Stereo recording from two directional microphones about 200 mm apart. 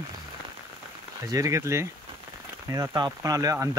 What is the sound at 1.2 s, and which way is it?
Speech, 15° right (ahead or behind).